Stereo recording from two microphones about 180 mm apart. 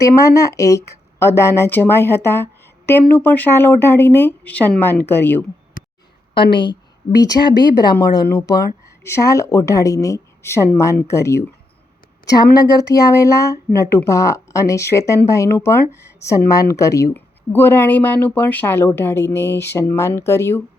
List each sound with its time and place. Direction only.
0.0 s speech: 15° left (ahead or behind)
5.8 s a sound: 50° left (ahead or behind)
6.3 s a woman's voice: 25° left (ahead or behind)